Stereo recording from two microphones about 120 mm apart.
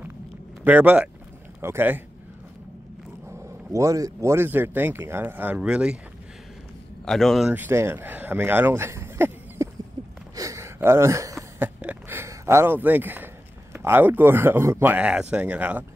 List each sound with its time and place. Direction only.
0.7 s speech: 15° right (ahead or behind)
3.3 s speech: 25° right (ahead or behind); by 5.9 s 10° right (ahead or behind)
7.1 s speech: centre (ahead or behind)
7.5 s speech: 20° right (ahead or behind)
10.3 s a sound: 25° right (ahead or behind)
11.8 s a sound: 15° right (ahead or behind)
13.7 s speech: 15° right (ahead or behind)